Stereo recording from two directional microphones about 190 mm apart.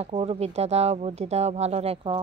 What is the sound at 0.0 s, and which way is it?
Speech, 35° right (ahead or behind).